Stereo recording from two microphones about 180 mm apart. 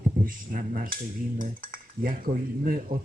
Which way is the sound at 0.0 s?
50° right (ahead or behind).